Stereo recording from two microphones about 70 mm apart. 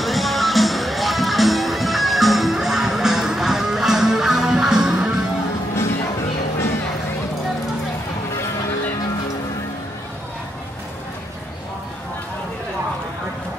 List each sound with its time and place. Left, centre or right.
0.0 s music: centre